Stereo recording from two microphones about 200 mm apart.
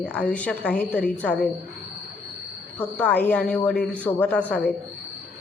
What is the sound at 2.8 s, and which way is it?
A woman's voice, 10° left (ahead or behind).